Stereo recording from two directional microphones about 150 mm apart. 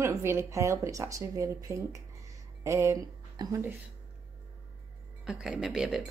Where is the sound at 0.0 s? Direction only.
15° right (ahead or behind).